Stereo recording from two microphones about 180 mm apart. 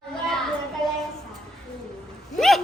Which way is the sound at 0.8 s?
5° left (ahead or behind).